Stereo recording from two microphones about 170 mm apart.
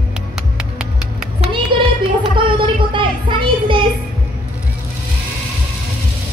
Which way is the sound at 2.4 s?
30° right (ahead or behind).